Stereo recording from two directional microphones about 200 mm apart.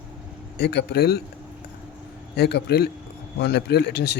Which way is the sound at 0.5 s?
55° left (ahead or behind).